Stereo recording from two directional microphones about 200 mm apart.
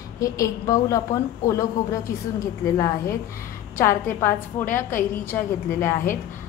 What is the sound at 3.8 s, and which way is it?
A woman's voice, 10° left (ahead or behind).